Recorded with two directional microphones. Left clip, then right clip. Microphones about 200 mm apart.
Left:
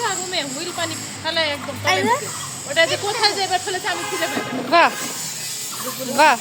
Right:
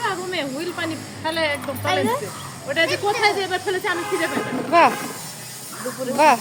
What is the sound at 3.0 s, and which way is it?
Speech, 50° right (ahead or behind).